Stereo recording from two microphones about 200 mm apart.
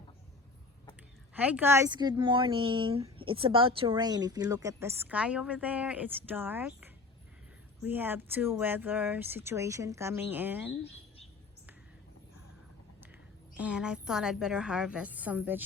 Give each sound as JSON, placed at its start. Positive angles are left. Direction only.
{"t": 1.3, "sound": "a woman's voice", "side_deg": -5}
{"t": 13.6, "sound": "a woman's voice", "side_deg": -5}